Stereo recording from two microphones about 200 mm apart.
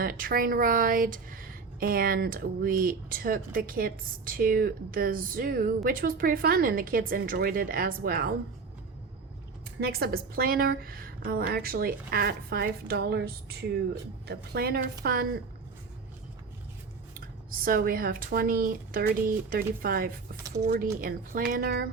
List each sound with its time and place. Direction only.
0.0 s a woman's voice: 45° right (ahead or behind)
9.8 s a woman's voice: 50° right (ahead or behind)
17.2 s a woman's voice: 45° right (ahead or behind)